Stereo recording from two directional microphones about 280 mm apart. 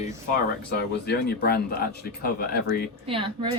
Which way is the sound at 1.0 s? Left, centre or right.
Left.